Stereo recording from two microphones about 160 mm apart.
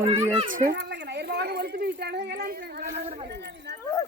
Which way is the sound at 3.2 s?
90° right.